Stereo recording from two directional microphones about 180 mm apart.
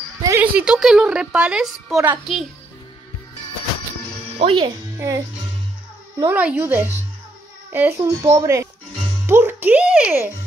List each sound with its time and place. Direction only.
0.2 s a woman's voice: 15° right (ahead or behind)
4.4 s speech: 30° right (ahead or behind)
4.9 s a child's voice: 20° right (ahead or behind)